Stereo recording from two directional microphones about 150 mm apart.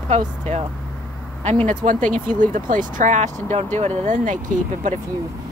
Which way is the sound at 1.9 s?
60° right (ahead or behind).